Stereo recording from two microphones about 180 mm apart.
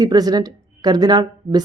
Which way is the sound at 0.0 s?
20° right (ahead or behind).